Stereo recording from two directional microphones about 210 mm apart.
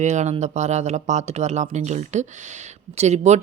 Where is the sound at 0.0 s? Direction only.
35° right (ahead or behind).